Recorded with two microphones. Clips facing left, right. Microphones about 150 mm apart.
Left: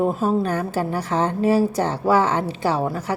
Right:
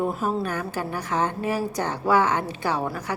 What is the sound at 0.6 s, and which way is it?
Speech, 30° left (ahead or behind).